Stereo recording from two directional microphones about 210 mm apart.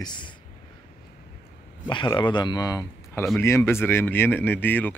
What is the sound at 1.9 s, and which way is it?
Speech, 20° left (ahead or behind).